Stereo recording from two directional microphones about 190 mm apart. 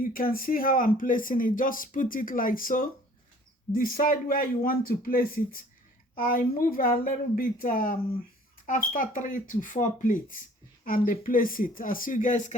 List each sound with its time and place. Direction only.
0.0 s speech: 50° left (ahead or behind)